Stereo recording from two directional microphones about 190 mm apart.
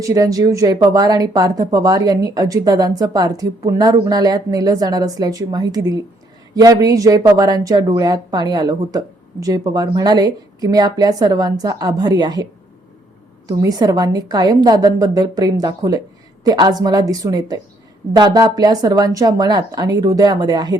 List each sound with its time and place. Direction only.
0.0 s speech: 15° right (ahead or behind)
13.5 s speech: 20° right (ahead or behind)